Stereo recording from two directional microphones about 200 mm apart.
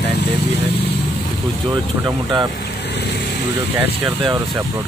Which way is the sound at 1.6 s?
20° right (ahead or behind).